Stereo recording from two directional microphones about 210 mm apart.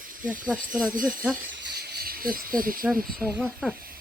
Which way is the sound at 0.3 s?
5° right (ahead or behind).